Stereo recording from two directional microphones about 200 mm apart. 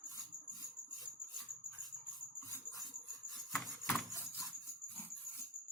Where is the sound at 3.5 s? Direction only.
Centre (ahead or behind).